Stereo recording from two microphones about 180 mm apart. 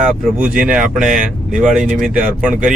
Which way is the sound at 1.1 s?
45° right (ahead or behind).